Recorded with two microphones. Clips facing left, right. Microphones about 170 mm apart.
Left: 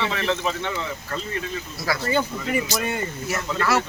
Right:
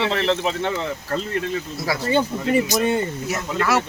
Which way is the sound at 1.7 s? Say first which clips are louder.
Right 2 dB; 25° right (ahead or behind).